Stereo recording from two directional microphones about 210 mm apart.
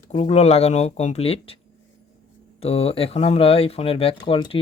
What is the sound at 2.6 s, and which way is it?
Speech, 30° left (ahead or behind).